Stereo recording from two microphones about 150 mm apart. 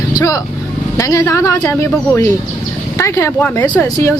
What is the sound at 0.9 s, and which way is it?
A woman's voice, 20° left (ahead or behind).